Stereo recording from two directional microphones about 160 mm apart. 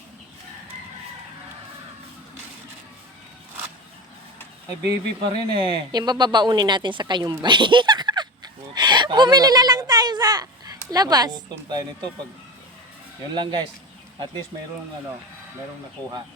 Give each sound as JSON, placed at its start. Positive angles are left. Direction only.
{"t": 5.2, "sound": "speech", "side_deg": -30}
{"t": 13.3, "sound": "speech", "side_deg": -30}